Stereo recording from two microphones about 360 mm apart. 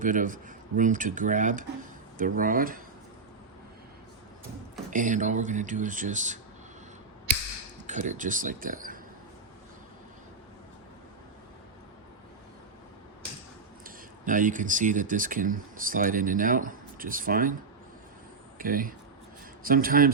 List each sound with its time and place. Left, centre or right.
0.0 s speech: right
4.9 s speech: right
7.9 s speech: centre
13.8 s speech: right
18.6 s speech: right